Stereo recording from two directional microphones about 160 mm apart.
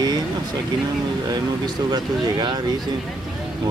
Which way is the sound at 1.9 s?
25° right (ahead or behind).